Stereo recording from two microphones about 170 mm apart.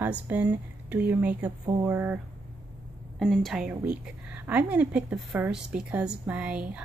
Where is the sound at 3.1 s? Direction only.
5° left (ahead or behind).